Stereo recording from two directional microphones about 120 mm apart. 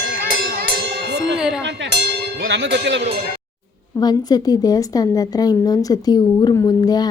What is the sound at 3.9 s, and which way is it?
A woman's voice, 35° left (ahead or behind).